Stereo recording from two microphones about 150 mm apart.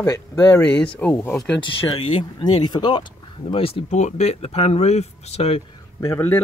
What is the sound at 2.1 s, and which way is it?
Speech, 35° left (ahead or behind).